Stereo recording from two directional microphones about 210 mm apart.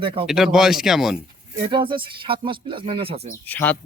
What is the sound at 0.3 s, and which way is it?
Speech, centre (ahead or behind).